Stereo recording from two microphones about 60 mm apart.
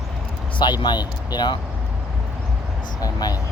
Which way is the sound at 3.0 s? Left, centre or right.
Left.